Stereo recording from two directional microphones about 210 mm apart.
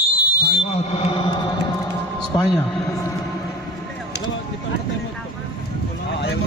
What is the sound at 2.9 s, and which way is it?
Music, 15° left (ahead or behind).